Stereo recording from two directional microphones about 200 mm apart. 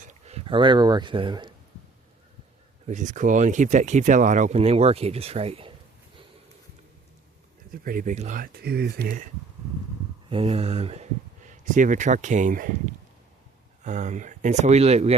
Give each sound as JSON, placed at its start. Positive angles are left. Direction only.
{"t": 0.0, "sound": "speech", "side_deg": -35}
{"t": 2.8, "sound": "speech", "side_deg": -40}
{"t": 7.7, "sound": "speech", "side_deg": -45}
{"t": 10.2, "sound": "speech", "side_deg": -30}